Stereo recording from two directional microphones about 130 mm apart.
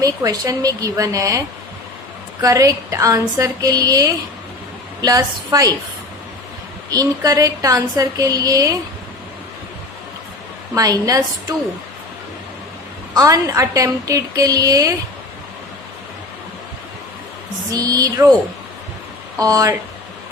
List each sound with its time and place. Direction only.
0.0 s a woman's voice: 25° right (ahead or behind)
6.9 s a woman's voice: 25° right (ahead or behind)
10.8 s a woman's voice: 30° right (ahead or behind)
13.1 s a woman's voice: 25° right (ahead or behind)
17.7 s a woman's voice: 30° right (ahead or behind)
19.4 s a woman's voice: 25° right (ahead or behind)